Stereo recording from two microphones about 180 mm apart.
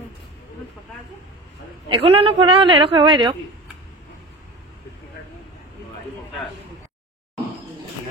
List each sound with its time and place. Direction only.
1.9 s a woman's voice: 30° right (ahead or behind)